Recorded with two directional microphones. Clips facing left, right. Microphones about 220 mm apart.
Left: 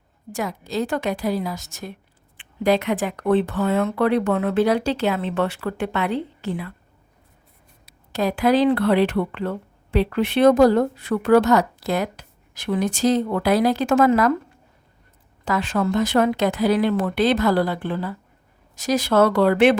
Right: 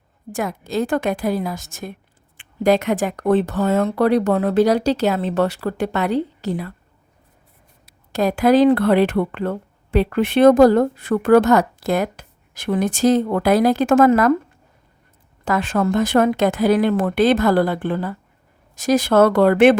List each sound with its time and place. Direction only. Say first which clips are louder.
0.3 s speech: right 3 dB; 50° right (ahead or behind)
8.1 s speech: right 4 dB; 45° right (ahead or behind)
15.4 s speech: right 3 dB; 50° right (ahead or behind)